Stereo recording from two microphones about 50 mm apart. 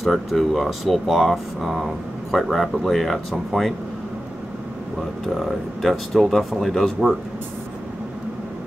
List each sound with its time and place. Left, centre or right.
0.0 s speech: centre
5.4 s speech: centre